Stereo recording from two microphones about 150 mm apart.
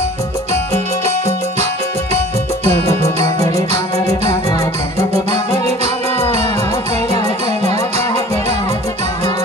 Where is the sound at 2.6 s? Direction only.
45° right (ahead or behind).